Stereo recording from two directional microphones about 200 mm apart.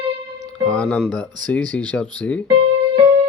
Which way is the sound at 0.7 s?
5° left (ahead or behind).